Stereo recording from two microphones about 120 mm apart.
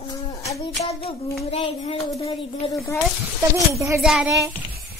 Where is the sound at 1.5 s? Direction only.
60° left (ahead or behind).